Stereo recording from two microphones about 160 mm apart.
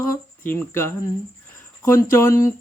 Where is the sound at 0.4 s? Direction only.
15° left (ahead or behind).